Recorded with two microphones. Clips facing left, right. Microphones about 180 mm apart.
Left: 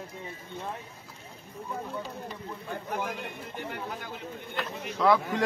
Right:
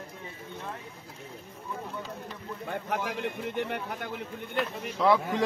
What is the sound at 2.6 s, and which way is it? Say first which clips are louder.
Speech: right 2 dB; 75° right (ahead or behind).